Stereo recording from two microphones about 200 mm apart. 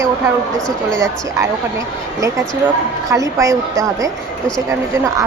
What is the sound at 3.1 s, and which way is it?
A woman's voice, 15° right (ahead or behind).